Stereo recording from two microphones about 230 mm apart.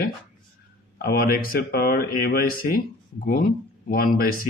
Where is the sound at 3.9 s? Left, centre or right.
Left.